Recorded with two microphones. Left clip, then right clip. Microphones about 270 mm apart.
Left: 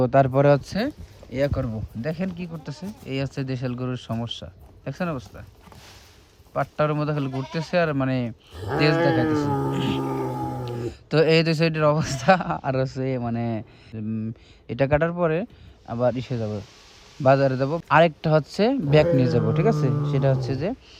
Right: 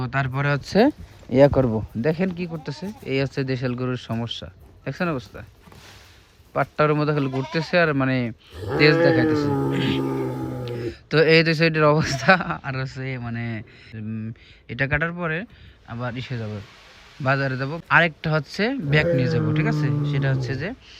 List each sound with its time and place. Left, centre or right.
0.0 s speech: left
0.6 s a man's voice: centre
6.5 s a man's voice: centre